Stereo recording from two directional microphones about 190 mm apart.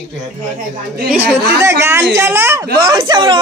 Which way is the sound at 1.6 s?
15° right (ahead or behind).